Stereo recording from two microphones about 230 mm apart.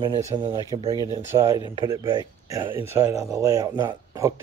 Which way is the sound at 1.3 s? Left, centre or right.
Centre.